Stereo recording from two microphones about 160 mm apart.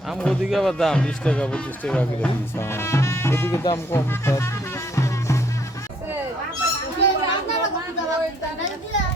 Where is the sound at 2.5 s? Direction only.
15° left (ahead or behind).